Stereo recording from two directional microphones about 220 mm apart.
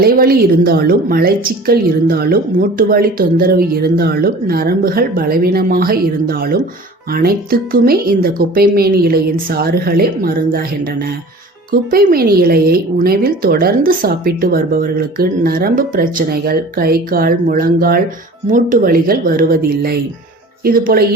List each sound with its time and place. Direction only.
0.0 s speech: 45° right (ahead or behind)
11.7 s speech: 40° right (ahead or behind)